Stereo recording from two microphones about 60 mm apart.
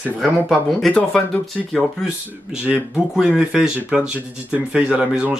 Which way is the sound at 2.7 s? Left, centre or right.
Centre.